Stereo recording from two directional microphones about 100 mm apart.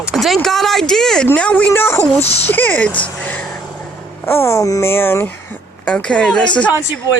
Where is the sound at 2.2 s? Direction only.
90° left.